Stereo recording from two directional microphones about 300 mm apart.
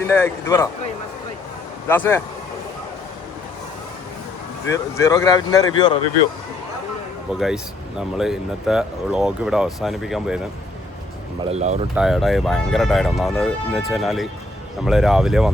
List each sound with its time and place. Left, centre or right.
0.1 s speech: centre
1.9 s speech: centre
4.7 s speech: centre
7.3 s speech: centre
11.4 s speech: right
11.9 s speech: centre